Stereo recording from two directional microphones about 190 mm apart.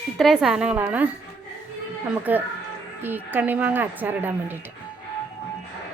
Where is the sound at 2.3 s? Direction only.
10° right (ahead or behind).